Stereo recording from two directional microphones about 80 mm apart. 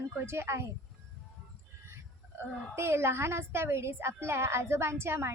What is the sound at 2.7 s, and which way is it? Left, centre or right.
A woman's voice, right.